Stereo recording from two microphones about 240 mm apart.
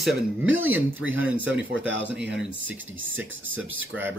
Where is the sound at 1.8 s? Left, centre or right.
Right.